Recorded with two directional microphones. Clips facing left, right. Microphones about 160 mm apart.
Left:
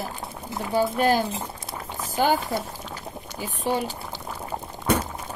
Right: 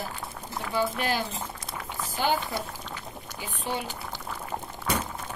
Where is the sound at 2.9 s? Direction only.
40° left (ahead or behind).